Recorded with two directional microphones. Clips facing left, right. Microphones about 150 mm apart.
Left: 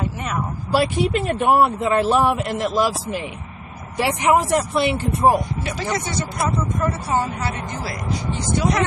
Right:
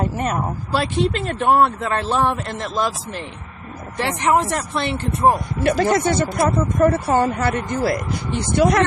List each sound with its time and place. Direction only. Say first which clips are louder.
0.0 s speech: right 4 dB; 40° right (ahead or behind)
0.7 s a man's voice: left 2 dB; 10° left (ahead or behind)
5.6 s speech: right 8 dB; 55° right (ahead or behind)